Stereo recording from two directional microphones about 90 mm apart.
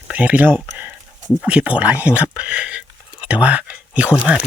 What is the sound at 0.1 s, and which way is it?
Speech, 15° right (ahead or behind).